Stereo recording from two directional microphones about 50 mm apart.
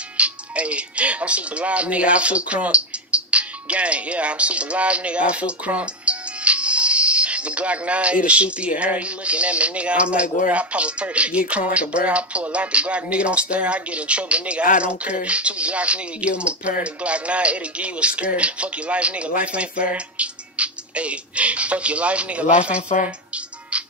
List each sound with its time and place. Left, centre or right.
0.2 s speech: right